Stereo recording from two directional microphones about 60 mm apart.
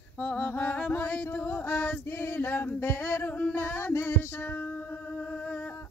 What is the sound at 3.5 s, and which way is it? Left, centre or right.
Music, left.